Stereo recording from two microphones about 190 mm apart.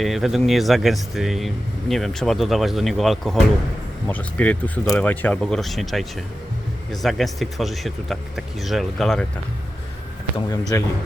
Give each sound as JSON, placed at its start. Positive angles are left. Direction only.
{"t": 0.0, "sound": "speech", "side_deg": 0}
{"t": 10.7, "sound": "speech", "side_deg": 15}